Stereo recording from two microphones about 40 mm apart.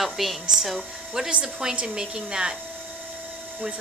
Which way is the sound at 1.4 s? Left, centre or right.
Centre.